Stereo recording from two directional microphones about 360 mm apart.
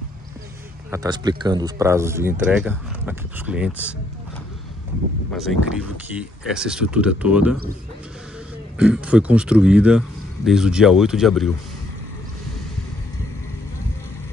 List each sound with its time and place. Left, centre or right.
0.8 s speech: centre
5.3 s speech: centre
8.7 s speech: centre